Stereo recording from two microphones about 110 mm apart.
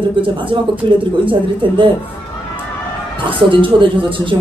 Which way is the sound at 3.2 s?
50° right (ahead or behind).